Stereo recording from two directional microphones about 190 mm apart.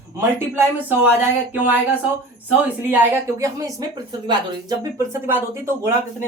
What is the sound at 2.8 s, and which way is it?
A woman's voice, 10° right (ahead or behind).